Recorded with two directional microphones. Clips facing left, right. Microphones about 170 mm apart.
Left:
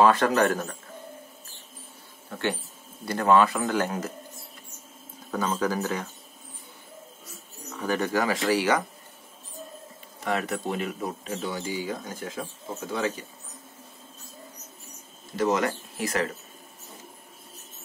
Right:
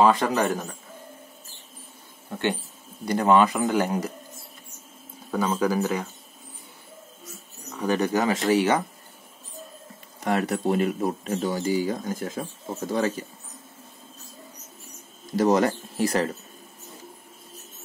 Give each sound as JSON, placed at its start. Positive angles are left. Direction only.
{"t": 0.0, "sound": "speech", "side_deg": -15}
{"t": 2.2, "sound": "speech", "side_deg": -20}
{"t": 5.3, "sound": "speech", "side_deg": -10}
{"t": 7.8, "sound": "speech", "side_deg": -15}
{"t": 10.2, "sound": "speech", "side_deg": -40}
{"t": 15.3, "sound": "speech", "side_deg": -35}